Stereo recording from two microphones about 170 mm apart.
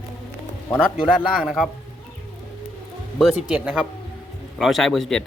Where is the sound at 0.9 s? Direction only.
5° right (ahead or behind).